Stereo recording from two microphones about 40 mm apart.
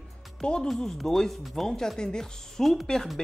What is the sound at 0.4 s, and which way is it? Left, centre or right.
Speech, left.